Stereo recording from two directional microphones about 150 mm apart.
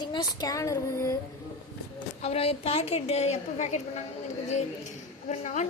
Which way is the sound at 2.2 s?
40° left (ahead or behind).